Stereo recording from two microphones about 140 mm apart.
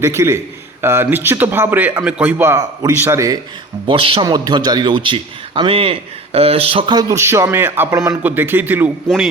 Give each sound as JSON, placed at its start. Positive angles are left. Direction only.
{"t": 0.0, "sound": "a man's voice", "side_deg": -20}
{"t": 3.8, "sound": "a man's voice", "side_deg": -40}